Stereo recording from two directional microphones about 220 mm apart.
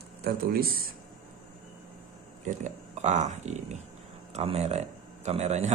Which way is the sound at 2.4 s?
30° right (ahead or behind).